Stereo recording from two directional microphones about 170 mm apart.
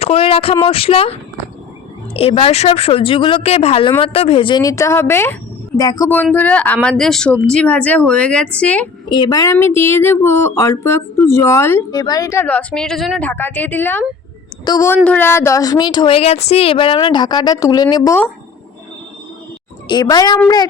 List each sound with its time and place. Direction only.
0.0 s speech: 35° left (ahead or behind); by 8.9 s 10° left (ahead or behind)
9.0 s a woman's voice: 25° left (ahead or behind)
19.9 s a woman's voice: 25° left (ahead or behind)